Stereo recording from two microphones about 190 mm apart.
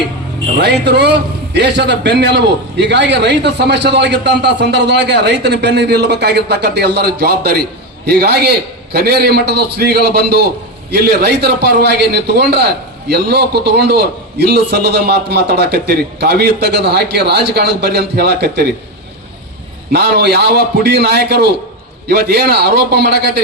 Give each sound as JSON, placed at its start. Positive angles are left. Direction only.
{"t": 0.6, "sound": "a man's voice", "side_deg": -60}
{"t": 19.9, "sound": "a man's voice", "side_deg": -60}